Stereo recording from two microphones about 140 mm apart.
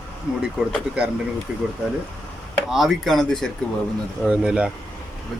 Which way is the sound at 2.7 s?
Centre (ahead or behind).